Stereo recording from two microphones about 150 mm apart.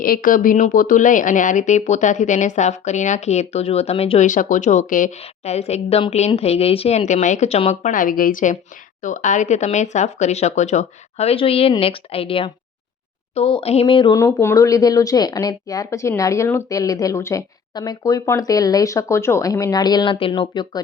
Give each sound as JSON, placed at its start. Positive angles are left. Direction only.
{"t": 0.0, "sound": "speech", "side_deg": 70}
{"t": 4.3, "sound": "speech", "side_deg": 60}
{"t": 11.8, "sound": "a sound", "side_deg": 40}
{"t": 14.2, "sound": "speech", "side_deg": 20}